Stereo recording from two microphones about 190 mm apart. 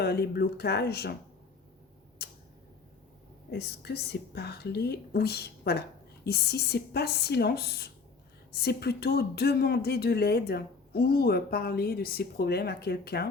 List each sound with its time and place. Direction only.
0.0 s speech: 55° left (ahead or behind)
2.2 s tick-tock: 60° left (ahead or behind)
3.5 s speech: 60° left (ahead or behind)